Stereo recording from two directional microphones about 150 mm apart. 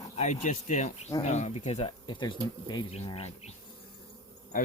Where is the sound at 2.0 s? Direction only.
30° left (ahead or behind).